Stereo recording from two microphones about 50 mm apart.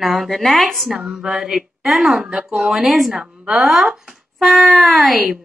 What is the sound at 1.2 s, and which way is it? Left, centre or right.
Mantra, centre.